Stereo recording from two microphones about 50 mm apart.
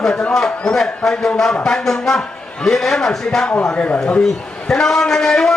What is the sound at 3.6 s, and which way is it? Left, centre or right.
Speech, left.